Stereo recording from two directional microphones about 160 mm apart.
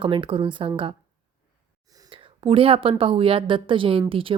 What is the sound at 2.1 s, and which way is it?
A woman's voice, 35° right (ahead or behind).